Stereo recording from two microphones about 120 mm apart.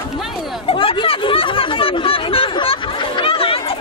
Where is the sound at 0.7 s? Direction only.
50° left (ahead or behind).